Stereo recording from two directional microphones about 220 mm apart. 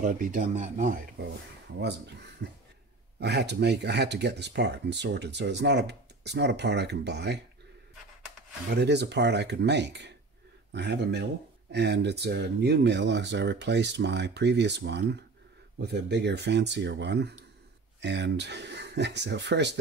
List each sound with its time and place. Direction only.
0.0 s speech: 35° right (ahead or behind)
2.4 s speech: 50° right (ahead or behind)
8.8 s speech: 50° right (ahead or behind)